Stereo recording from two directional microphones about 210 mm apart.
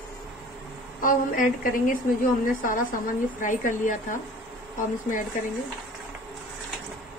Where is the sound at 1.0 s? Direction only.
40° left (ahead or behind).